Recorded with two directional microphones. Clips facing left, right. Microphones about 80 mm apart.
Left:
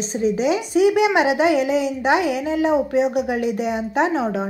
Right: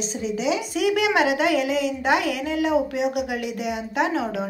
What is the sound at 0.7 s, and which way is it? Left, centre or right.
Speech, left.